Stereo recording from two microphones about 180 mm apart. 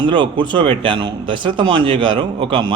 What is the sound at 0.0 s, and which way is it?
A man's voice, 25° right (ahead or behind).